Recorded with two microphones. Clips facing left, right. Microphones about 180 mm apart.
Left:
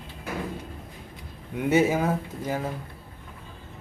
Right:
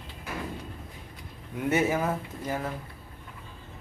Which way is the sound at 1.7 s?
25° left (ahead or behind).